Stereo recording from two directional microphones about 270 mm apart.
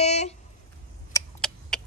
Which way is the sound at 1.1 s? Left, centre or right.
Centre.